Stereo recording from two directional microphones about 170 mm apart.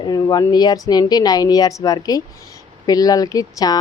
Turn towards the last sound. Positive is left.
turn(degrees=20)  # may be behind; listen again after turning